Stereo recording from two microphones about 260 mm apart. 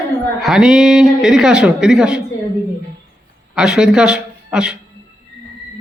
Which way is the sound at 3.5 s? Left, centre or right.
Centre.